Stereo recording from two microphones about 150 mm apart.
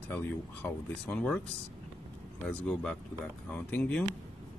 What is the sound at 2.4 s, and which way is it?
Speech, 5° left (ahead or behind).